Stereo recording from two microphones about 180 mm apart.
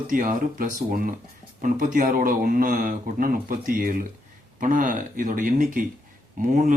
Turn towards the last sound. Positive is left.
turn(degrees=-45)  # may be behind; listen again after turning